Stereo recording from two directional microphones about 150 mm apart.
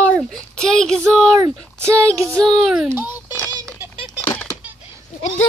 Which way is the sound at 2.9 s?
15° right (ahead or behind).